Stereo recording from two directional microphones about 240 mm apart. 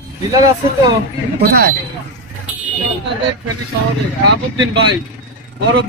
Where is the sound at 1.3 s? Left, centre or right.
Right.